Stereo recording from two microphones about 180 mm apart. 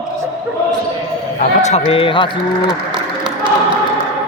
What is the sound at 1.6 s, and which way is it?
Speech, 40° left (ahead or behind).